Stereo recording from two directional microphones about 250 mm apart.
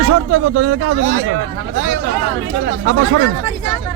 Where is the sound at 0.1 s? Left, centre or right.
Right.